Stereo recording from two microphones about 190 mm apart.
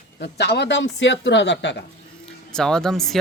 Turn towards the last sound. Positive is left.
turn(degrees=0)  # may be behind; listen again after turning